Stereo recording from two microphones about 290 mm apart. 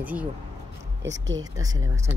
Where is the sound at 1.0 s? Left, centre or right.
Right.